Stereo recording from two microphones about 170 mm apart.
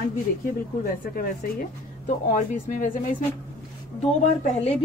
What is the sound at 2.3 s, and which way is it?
Speech, 50° left (ahead or behind).